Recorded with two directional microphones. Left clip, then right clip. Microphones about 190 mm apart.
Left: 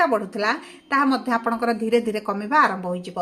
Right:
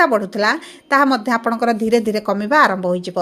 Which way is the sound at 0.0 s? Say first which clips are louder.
Right 6 dB; 45° right (ahead or behind).